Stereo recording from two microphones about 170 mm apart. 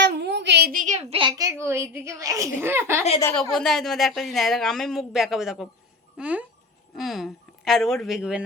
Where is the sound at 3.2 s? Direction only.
5° left (ahead or behind).